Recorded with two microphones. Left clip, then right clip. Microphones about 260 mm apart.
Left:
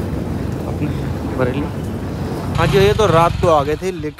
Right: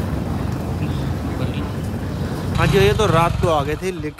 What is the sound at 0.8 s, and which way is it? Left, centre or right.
Vehicle, centre.